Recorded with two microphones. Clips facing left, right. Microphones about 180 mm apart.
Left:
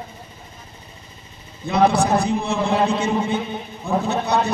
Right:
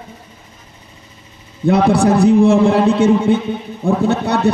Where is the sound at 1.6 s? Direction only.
85° right.